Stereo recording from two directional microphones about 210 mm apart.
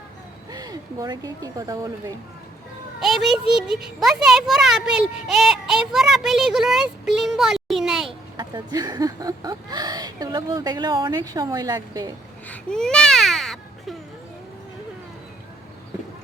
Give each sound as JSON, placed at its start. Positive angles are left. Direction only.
{"t": 0.5, "sound": "speech", "side_deg": -15}
{"t": 3.0, "sound": "a child's voice", "side_deg": 0}
{"t": 8.4, "sound": "speech", "side_deg": -20}
{"t": 12.5, "sound": "baby cry", "side_deg": 5}